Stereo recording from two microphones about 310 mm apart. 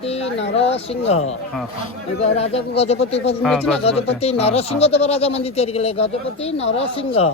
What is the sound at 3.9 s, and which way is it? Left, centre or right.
Speech, centre.